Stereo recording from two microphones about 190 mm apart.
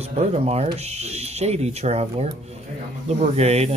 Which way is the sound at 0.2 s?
35° right (ahead or behind).